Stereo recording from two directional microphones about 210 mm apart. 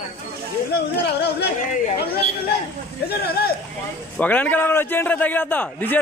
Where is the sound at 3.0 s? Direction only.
45° left (ahead or behind).